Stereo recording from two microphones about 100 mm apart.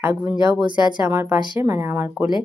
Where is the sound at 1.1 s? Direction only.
20° right (ahead or behind).